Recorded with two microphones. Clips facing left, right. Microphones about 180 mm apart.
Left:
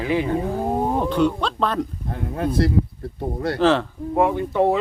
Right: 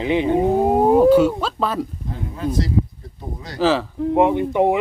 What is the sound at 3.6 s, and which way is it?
Speech, centre (ahead or behind).